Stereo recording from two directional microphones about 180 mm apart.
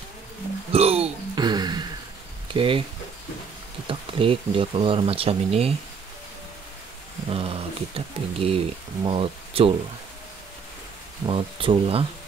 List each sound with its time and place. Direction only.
0.7 s a sound: 35° right (ahead or behind)
2.5 s speech: 30° right (ahead or behind)
3.8 s speech: 30° right (ahead or behind)
7.2 s speech: 35° right (ahead or behind)
11.2 s speech: 30° right (ahead or behind)